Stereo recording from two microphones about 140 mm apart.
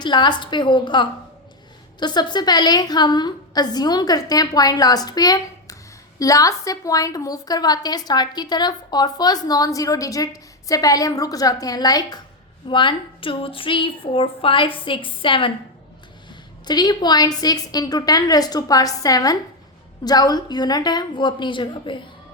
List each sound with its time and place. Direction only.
0.0 s a woman's voice: 30° left (ahead or behind)
16.6 s a woman's voice: 30° left (ahead or behind)